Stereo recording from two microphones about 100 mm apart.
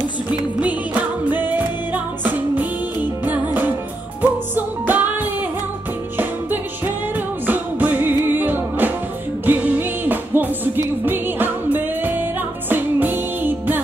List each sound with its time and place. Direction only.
0.3 s music: 15° right (ahead or behind)
2.2 s music: 15° right (ahead or behind)
7.4 s music: 15° right (ahead or behind)